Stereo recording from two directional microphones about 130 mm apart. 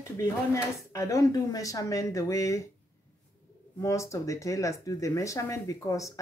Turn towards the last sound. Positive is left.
turn(degrees=25)  # may be behind; listen again after turning